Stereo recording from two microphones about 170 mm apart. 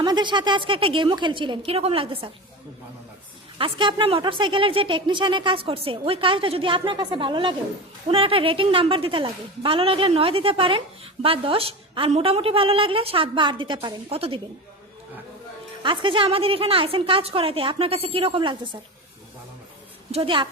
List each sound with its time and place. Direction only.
0.0 s a woman's voice: 25° right (ahead or behind)
3.6 s a woman's voice: 30° right (ahead or behind)
15.8 s a woman's voice: 30° right (ahead or behind)
20.1 s a woman's voice: 35° right (ahead or behind)